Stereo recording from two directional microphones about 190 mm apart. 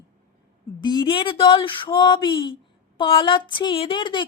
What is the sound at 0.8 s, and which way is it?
A man's voice, 25° left (ahead or behind).